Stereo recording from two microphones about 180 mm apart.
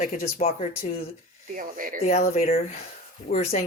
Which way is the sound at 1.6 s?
50° right (ahead or behind).